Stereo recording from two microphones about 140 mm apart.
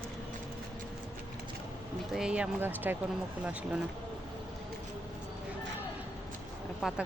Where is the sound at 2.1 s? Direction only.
5° right (ahead or behind).